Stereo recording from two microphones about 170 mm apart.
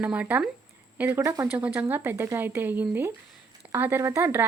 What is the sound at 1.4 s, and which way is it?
A woman's voice, 10° right (ahead or behind).